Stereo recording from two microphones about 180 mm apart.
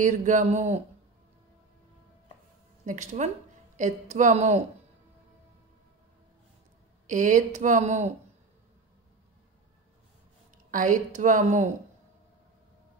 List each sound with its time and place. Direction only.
0.0 s speech: 45° right (ahead or behind)
2.8 s a woman's voice: 40° right (ahead or behind)
7.1 s speech: 45° right (ahead or behind)
10.7 s speech: 45° right (ahead or behind)